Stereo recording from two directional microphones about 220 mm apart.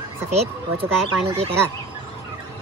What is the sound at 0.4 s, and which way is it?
A man's voice, 25° right (ahead or behind).